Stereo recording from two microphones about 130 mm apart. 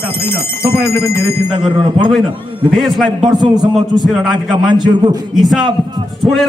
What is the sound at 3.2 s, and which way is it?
Speech, 35° right (ahead or behind).